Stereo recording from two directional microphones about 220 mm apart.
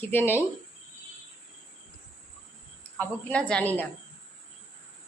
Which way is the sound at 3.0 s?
5° left (ahead or behind).